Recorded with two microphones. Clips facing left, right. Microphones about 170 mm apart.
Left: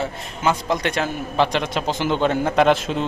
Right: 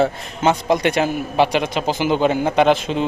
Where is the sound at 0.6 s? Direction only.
10° right (ahead or behind).